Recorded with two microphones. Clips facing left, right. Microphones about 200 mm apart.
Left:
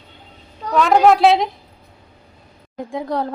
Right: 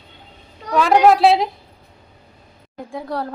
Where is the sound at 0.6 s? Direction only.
Centre (ahead or behind).